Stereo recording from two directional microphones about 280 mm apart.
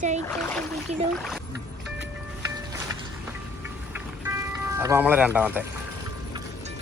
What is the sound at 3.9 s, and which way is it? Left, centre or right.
Music, centre.